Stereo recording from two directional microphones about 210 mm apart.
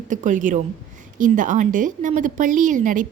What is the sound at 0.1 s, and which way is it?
A woman's voice, 35° right (ahead or behind).